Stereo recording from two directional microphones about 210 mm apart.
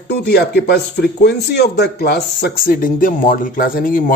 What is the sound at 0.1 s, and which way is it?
Speech, 50° left (ahead or behind).